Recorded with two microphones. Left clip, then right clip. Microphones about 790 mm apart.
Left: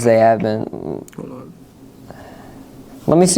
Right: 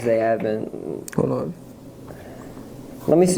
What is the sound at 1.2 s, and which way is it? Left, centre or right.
Speech, right.